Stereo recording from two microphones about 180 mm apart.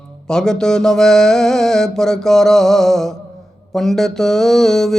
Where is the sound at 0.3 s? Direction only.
5° left (ahead or behind).